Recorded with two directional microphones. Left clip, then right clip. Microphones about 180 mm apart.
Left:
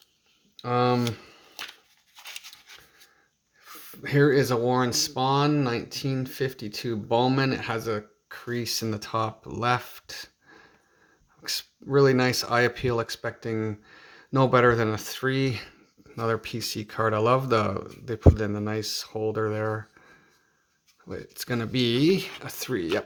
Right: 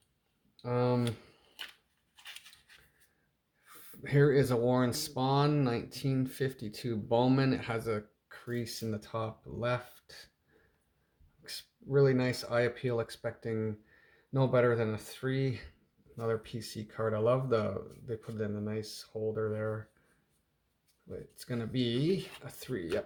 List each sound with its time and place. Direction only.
0.5 s speech: 20° left (ahead or behind)
3.7 s speech: 15° left (ahead or behind); by 10.2 s 30° left (ahead or behind)
11.4 s speech: 30° left (ahead or behind)
21.1 s speech: 35° left (ahead or behind)